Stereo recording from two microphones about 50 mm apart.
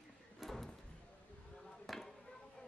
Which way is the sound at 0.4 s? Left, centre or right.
Centre.